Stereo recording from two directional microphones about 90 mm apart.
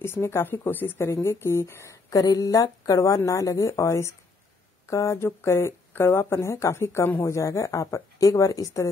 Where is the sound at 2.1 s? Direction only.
45° left (ahead or behind).